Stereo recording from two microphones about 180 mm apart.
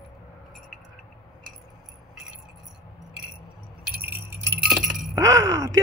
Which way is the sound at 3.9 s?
15° right (ahead or behind).